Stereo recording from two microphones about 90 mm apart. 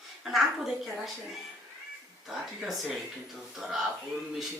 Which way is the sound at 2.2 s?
Centre (ahead or behind).